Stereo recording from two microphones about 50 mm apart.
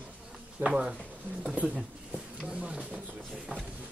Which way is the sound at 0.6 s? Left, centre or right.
Right.